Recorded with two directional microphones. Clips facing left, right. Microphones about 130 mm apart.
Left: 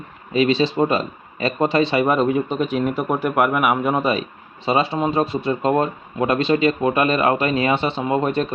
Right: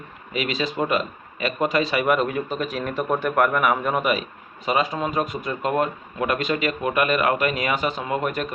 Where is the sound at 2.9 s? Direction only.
10° left (ahead or behind).